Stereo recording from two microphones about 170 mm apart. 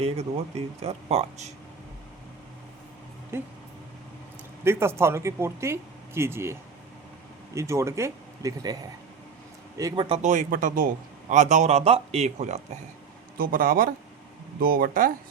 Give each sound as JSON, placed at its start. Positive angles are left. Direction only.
{"t": 0.0, "sound": "speech", "side_deg": -35}
{"t": 3.3, "sound": "speech", "side_deg": -15}
{"t": 4.6, "sound": "a man's voice", "side_deg": -15}
{"t": 10.2, "sound": "speech", "side_deg": -50}
{"t": 13.3, "sound": "speech", "side_deg": -55}